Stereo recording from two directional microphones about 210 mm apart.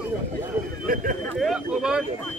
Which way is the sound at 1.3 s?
Centre (ahead or behind).